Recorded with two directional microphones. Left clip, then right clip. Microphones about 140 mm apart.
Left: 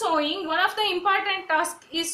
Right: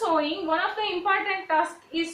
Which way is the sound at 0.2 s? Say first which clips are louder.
Left 2 dB; 40° left (ahead or behind).